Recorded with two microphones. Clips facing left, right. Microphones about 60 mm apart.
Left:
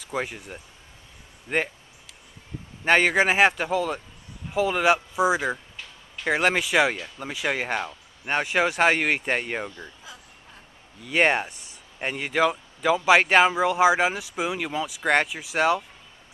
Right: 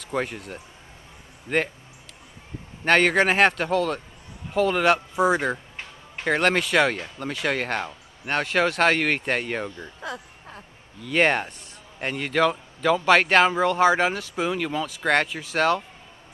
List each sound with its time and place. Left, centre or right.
0.0 s a man's voice: centre
2.8 s a man's voice: centre
10.0 s a sound: right
11.1 s a man's voice: centre